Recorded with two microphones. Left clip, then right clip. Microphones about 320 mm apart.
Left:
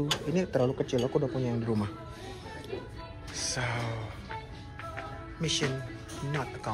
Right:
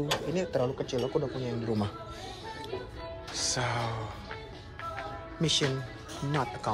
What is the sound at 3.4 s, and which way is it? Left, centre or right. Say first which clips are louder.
Speech: right 2 dB; centre.